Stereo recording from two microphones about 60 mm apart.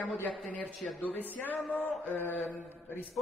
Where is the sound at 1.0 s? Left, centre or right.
Left.